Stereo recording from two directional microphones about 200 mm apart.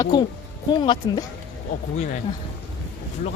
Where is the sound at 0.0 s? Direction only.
20° left (ahead or behind).